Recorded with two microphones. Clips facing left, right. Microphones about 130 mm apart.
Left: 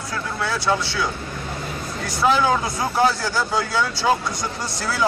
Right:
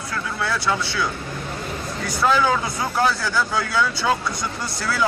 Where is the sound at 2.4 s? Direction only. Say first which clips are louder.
Left 1 dB; 20° left (ahead or behind).